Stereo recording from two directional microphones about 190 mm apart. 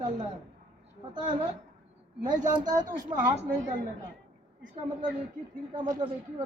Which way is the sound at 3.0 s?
40° right (ahead or behind).